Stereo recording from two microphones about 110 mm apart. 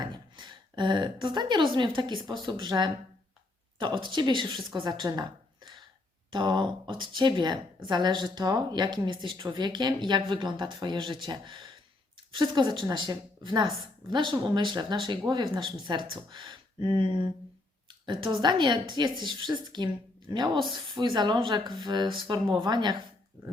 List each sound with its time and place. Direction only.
0.0 s a woman's voice: 45° right (ahead or behind)
6.3 s a woman's voice: 45° right (ahead or behind)